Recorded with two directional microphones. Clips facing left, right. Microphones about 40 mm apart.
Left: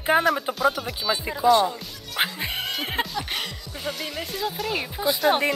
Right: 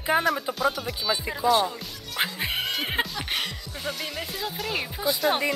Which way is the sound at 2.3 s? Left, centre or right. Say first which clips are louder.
Right 1 dB; centre.